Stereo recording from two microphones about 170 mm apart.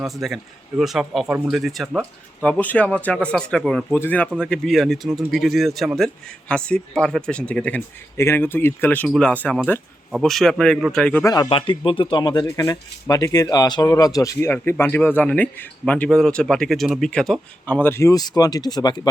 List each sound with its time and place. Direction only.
0.0 s speech: centre (ahead or behind)
11.2 s speech: 20° left (ahead or behind)
11.4 s speech: 30° left (ahead or behind)